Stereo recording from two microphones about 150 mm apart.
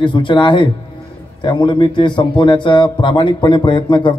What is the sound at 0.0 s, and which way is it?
A man's voice, 30° left (ahead or behind).